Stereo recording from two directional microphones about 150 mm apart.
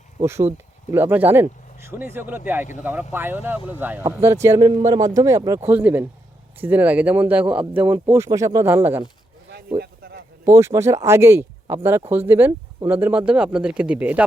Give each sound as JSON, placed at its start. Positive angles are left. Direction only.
{"t": 0.2, "sound": "speech", "side_deg": -20}
{"t": 9.8, "sound": "a sound", "side_deg": -90}
{"t": 10.4, "sound": "speech", "side_deg": -20}